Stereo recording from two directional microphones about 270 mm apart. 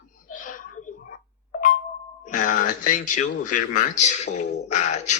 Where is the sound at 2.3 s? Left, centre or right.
Left.